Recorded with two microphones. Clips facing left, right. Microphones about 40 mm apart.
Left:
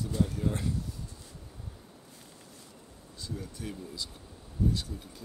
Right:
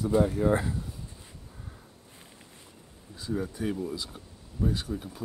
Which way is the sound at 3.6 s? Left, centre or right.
Right.